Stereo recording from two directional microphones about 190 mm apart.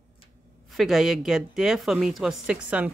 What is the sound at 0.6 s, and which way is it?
Speech, centre (ahead or behind).